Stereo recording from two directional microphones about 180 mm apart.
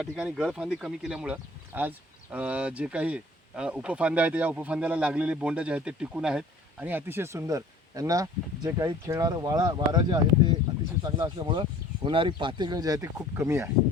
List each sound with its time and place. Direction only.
0.0 s speech: 5° right (ahead or behind)